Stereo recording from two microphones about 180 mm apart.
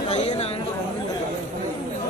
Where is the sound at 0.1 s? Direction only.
40° left (ahead or behind).